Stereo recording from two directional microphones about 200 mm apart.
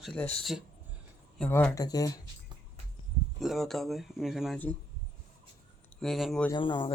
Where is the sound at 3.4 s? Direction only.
Centre (ahead or behind).